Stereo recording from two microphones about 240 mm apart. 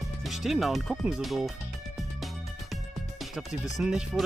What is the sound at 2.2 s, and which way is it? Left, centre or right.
Music, centre.